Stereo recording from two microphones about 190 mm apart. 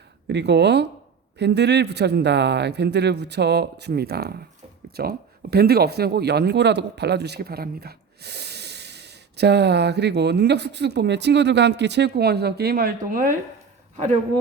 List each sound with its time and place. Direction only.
0.3 s speech: 65° right (ahead or behind); by 14.2 s 35° right (ahead or behind)